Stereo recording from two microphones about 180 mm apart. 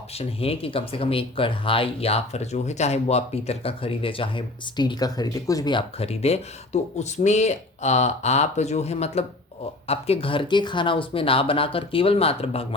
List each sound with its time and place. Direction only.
0.2 s speech: 30° left (ahead or behind)